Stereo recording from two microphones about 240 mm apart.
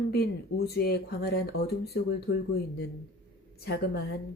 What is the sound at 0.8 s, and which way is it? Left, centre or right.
Speech, left.